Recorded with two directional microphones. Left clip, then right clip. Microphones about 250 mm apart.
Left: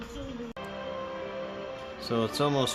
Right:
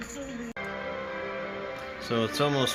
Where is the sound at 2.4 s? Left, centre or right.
Centre.